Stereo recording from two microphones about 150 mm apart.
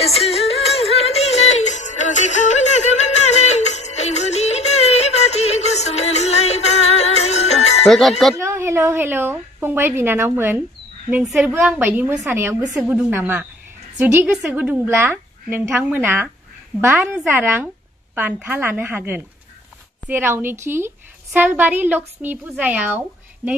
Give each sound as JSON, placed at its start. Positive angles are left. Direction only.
{"t": 0.0, "sound": "music", "side_deg": 40}
{"t": 7.8, "sound": "speech", "side_deg": 0}
{"t": 8.4, "sound": "a woman's voice", "side_deg": -20}